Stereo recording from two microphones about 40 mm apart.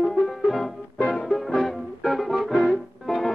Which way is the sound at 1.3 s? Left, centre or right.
Centre.